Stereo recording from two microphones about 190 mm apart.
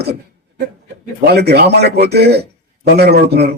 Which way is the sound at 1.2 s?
60° right (ahead or behind).